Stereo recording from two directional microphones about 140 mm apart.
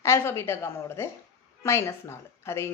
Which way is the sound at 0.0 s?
20° left (ahead or behind).